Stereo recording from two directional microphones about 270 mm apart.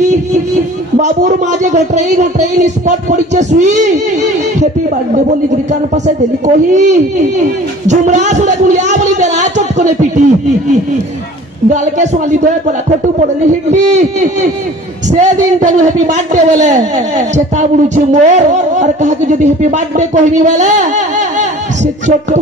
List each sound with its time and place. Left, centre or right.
0.0 s a sound: right
0.9 s speech: right
6.0 s speech: right
15.0 s speech: right